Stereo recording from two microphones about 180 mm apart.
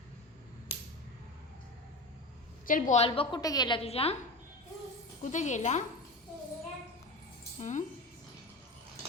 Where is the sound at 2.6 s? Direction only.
50° left (ahead or behind); by 3.8 s 20° left (ahead or behind).